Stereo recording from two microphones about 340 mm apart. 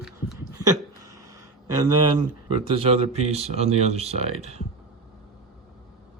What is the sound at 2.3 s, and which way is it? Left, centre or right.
Speech, centre.